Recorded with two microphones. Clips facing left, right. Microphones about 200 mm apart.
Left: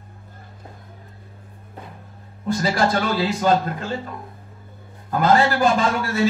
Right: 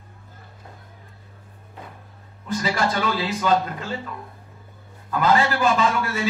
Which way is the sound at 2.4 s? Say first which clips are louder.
Left 3 dB; 40° left (ahead or behind).